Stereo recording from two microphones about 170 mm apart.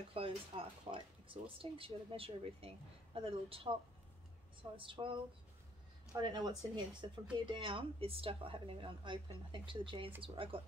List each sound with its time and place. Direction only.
0.1 s a woman's voice: 35° right (ahead or behind)
4.7 s a woman's voice: 30° right (ahead or behind)
6.1 s a woman's voice: 25° right (ahead or behind)